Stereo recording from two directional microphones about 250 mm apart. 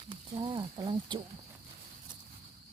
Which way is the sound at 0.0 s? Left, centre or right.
Centre.